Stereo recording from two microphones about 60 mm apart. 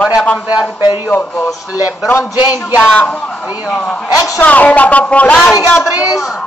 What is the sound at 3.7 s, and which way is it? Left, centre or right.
A woman's voice, centre.